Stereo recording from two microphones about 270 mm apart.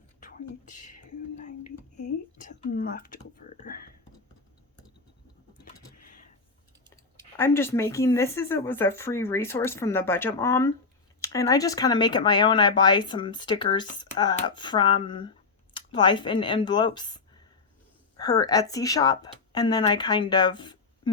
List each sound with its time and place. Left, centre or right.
2.5 s speech: left
7.3 s speech: centre